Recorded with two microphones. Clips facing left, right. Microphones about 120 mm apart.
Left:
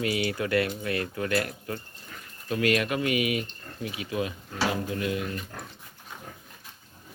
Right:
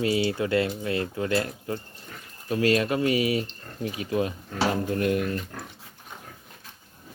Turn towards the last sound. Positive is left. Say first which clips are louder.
# right 5 dB
turn(degrees=-50)  # may be behind; listen again after turning